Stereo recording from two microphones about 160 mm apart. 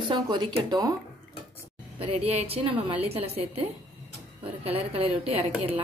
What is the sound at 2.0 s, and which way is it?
A woman's voice, 40° right (ahead or behind).